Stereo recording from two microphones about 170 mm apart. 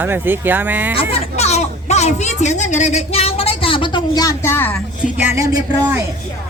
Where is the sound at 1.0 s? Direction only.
35° left (ahead or behind); by 4.8 s 15° left (ahead or behind).